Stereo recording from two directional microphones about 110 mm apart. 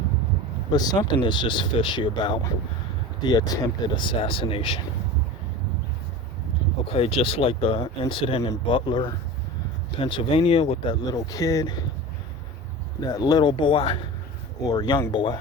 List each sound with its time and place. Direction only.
0.7 s speech: 40° left (ahead or behind); by 4.8 s 55° left (ahead or behind)
6.8 s speech: 60° left (ahead or behind)
8.6 s speech: 45° left (ahead or behind)
11.0 s speech: 35° left (ahead or behind)
13.0 s speech: 35° left (ahead or behind); by 14.0 s 55° left (ahead or behind)
14.6 s speech: 35° left (ahead or behind)